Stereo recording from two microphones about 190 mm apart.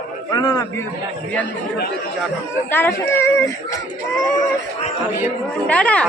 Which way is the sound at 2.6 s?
10° left (ahead or behind).